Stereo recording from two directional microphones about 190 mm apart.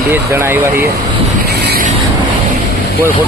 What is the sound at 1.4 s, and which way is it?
Vehicle, 60° right (ahead or behind).